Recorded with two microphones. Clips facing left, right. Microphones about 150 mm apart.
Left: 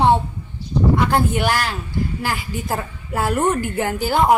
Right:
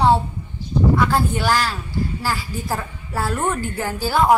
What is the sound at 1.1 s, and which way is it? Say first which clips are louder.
A woman's voice: left 1 dB; 20° left (ahead or behind).